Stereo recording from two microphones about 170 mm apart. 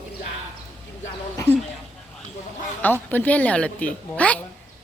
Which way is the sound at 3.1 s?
10° left (ahead or behind).